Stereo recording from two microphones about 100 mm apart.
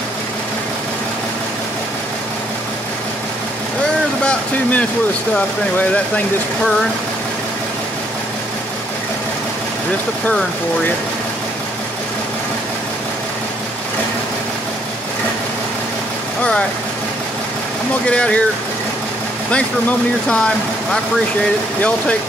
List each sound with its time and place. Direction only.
4.2 s a sound: 10° left (ahead or behind)
5.3 s speech: 15° left (ahead or behind)
18.0 s speech: 10° left (ahead or behind)
19.5 s speech: 10° left (ahead or behind)